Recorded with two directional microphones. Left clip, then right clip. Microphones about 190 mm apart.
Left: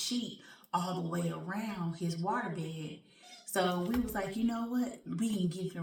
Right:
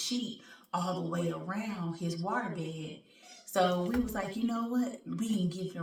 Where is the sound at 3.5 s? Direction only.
10° left (ahead or behind).